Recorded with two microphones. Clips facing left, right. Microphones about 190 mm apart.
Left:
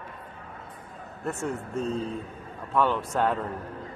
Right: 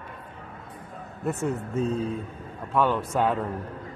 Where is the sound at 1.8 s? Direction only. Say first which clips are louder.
Right 3 dB; centre (ahead or behind).